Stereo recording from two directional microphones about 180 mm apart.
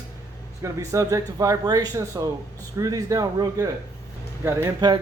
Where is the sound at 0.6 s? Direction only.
15° right (ahead or behind).